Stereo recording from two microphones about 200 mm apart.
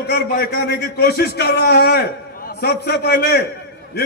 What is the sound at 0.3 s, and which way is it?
A man's voice, 50° left (ahead or behind).